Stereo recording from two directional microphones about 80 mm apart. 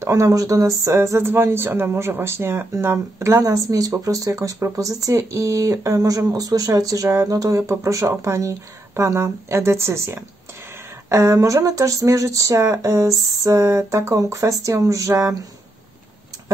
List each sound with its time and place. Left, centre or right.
0.0 s speech: right